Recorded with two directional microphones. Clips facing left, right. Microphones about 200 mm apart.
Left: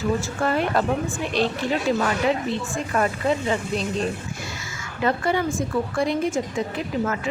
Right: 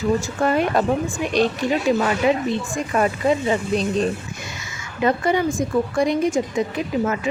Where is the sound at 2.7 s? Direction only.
15° right (ahead or behind).